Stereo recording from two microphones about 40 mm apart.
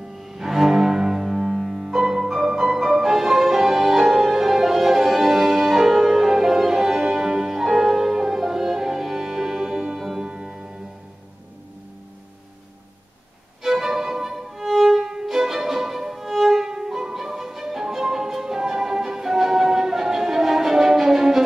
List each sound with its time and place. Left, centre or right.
0.2 s cello: centre
13.6 s violin: centre
15.0 s violin: centre